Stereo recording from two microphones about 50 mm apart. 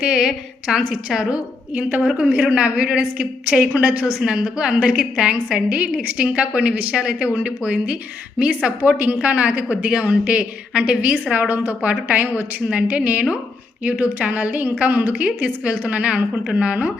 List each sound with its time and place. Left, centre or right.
0.0 s a woman's voice: centre
1.7 s a woman's voice: right
4.0 s a woman's voice: centre
8.8 s a woman's voice: right
11.1 s a woman's voice: right